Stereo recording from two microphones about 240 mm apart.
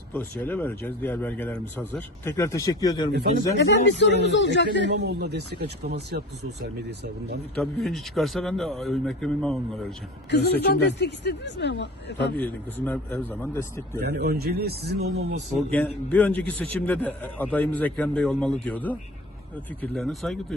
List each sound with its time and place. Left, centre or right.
0.1 s speech: centre
3.8 s speech: left
4.9 s speech: right
7.5 s a man's voice: centre
10.3 s speech: left
12.4 s speech: centre
14.0 s speech: right
15.7 s a man's voice: centre